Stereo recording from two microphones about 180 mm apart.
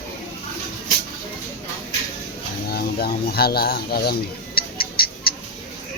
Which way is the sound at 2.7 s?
60° left (ahead or behind).